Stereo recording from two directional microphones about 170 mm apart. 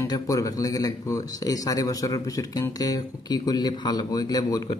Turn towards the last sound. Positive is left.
turn(degrees=20)  # may be behind; listen again after turning